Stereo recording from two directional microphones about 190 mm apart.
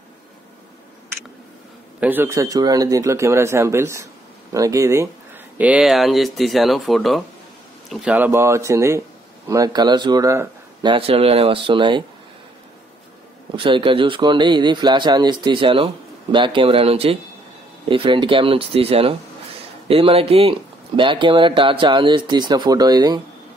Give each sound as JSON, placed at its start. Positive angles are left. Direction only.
{"t": 2.0, "sound": "a man's voice", "side_deg": -10}
{"t": 13.6, "sound": "speech", "side_deg": -25}